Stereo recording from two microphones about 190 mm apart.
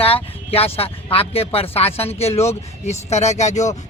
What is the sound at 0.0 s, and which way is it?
A man's voice, 30° left (ahead or behind).